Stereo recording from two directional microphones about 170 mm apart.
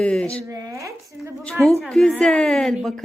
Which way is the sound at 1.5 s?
5° left (ahead or behind).